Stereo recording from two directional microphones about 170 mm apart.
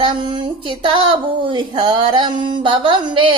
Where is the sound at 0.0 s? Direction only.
25° right (ahead or behind).